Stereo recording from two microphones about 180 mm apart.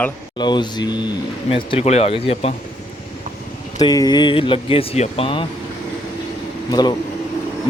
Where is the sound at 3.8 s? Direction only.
20° left (ahead or behind).